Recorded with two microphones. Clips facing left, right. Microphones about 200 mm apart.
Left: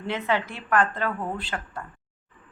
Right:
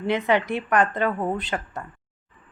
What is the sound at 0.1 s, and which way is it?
A woman's voice, 15° right (ahead or behind).